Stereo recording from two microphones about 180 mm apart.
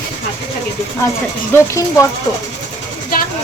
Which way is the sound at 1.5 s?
15° left (ahead or behind).